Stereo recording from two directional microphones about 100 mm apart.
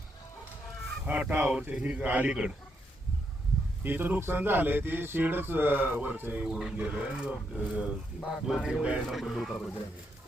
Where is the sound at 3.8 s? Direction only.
20° right (ahead or behind); by 9.6 s centre (ahead or behind).